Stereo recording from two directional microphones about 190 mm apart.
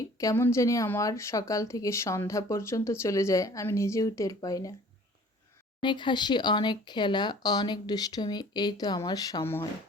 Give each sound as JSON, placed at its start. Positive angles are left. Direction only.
{"t": 0.2, "sound": "speech", "side_deg": 15}
{"t": 5.8, "sound": "speech", "side_deg": 25}